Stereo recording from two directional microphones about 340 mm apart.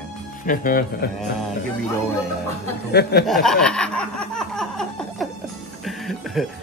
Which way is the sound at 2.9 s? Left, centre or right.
Left.